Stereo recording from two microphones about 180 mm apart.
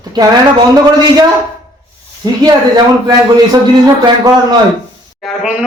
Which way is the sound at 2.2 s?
20° right (ahead or behind).